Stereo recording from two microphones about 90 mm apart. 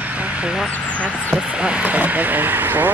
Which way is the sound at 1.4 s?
10° right (ahead or behind).